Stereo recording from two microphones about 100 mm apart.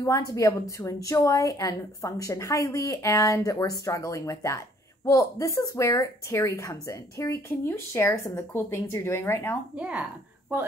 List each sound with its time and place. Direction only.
0.0 s a woman's voice: 35° left (ahead or behind)
9.8 s speech: 10° right (ahead or behind)